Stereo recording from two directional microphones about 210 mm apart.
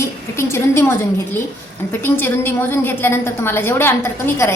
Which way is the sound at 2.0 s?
10° left (ahead or behind).